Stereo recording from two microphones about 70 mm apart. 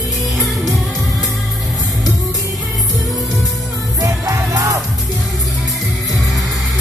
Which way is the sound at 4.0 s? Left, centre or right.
Right.